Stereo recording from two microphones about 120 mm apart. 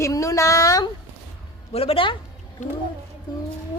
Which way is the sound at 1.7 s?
55° left (ahead or behind).